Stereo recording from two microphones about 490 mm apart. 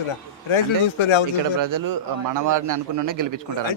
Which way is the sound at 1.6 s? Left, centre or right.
Right.